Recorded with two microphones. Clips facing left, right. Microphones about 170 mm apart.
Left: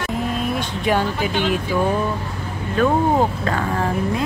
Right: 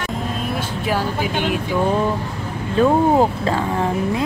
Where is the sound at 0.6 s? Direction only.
5° right (ahead or behind).